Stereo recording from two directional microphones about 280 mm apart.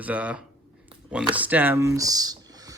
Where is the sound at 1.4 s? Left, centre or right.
Centre.